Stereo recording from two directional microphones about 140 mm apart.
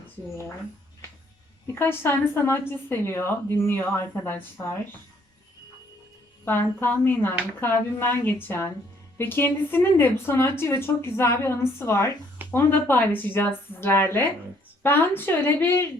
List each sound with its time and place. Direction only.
1.6 s speech: 15° left (ahead or behind)
6.4 s speech: 15° left (ahead or behind)